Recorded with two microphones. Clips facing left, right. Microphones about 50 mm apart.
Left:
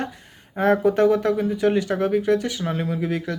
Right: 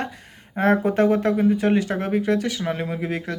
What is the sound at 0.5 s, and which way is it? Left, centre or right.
Speech, right.